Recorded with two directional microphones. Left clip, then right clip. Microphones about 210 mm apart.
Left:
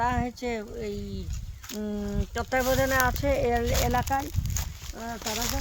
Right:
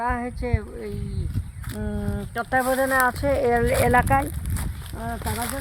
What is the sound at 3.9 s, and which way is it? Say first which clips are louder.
Speech: right 10 dB; 45° right (ahead or behind).